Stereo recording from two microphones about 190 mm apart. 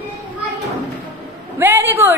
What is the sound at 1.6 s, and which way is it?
Speech, 10° right (ahead or behind).